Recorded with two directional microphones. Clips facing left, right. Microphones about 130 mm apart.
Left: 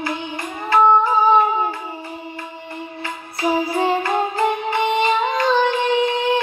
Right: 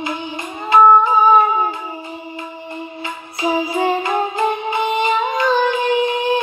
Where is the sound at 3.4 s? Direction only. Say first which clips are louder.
Right 1 dB; 15° right (ahead or behind).